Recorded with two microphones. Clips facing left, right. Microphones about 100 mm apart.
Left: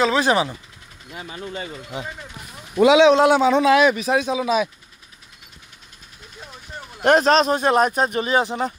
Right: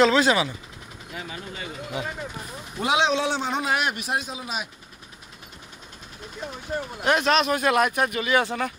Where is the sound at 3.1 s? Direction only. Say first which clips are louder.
Left 10 dB; 75° left (ahead or behind).